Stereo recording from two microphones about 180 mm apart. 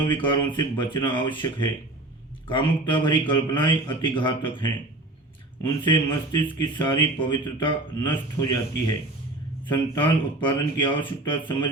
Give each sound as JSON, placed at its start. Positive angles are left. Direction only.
{"t": 0.0, "sound": "speech", "side_deg": 25}
{"t": 9.7, "sound": "speech", "side_deg": 25}